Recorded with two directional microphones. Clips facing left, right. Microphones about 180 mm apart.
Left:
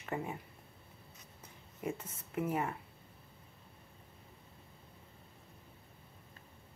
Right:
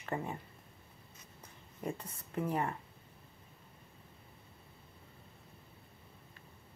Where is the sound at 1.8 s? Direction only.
5° left (ahead or behind).